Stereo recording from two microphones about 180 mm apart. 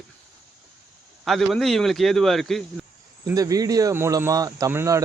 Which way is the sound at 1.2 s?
Centre (ahead or behind).